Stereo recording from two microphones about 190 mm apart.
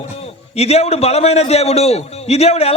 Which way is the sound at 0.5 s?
35° left (ahead or behind).